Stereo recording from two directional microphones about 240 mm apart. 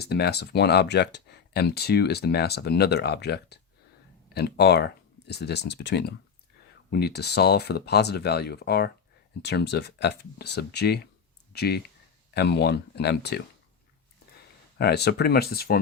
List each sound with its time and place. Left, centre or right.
0.0 s speech: left
14.8 s speech: left